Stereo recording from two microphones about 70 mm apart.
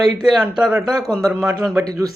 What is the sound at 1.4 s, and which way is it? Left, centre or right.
Speech, right.